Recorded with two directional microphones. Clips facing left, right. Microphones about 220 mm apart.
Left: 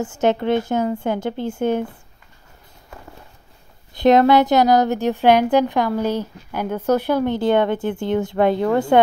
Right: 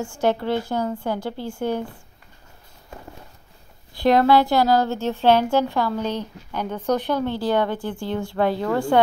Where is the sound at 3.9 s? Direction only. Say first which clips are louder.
Left 3 dB; 20° left (ahead or behind).